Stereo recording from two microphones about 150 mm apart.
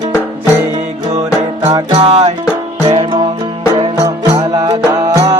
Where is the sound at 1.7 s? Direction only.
25° right (ahead or behind).